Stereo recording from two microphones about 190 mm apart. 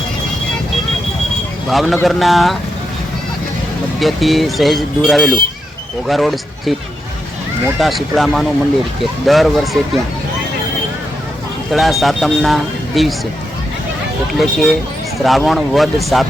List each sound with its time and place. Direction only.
1.7 s speech: centre (ahead or behind)
4.0 s speech: centre (ahead or behind)
7.8 s speech: centre (ahead or behind)
11.7 s speech: centre (ahead or behind)
14.3 s speech: centre (ahead or behind)